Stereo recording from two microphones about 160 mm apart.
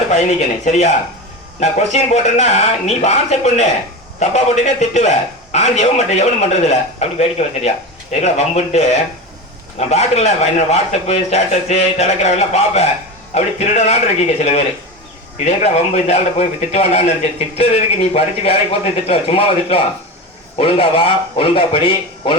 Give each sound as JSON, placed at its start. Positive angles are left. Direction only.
{"t": 0.1, "sound": "a man's voice", "side_deg": 50}